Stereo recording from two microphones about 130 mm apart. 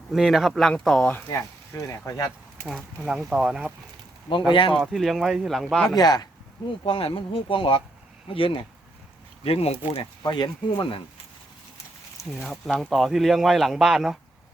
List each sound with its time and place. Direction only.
0.1 s speech: centre (ahead or behind)
1.1 s speech: 20° left (ahead or behind)
2.6 s speech: centre (ahead or behind)
4.7 s speech: centre (ahead or behind)
6.0 s speech: 30° left (ahead or behind)
6.8 s speech: 40° left (ahead or behind)
10.2 s speech: 35° left (ahead or behind)
12.4 s speech: centre (ahead or behind)